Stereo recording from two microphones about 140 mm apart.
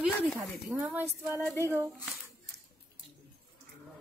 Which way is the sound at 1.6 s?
20° right (ahead or behind).